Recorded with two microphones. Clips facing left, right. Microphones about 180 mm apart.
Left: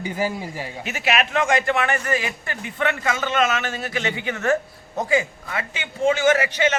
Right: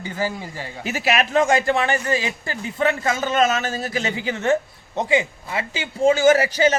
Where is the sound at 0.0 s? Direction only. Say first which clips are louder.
Left 1 dB; 15° left (ahead or behind).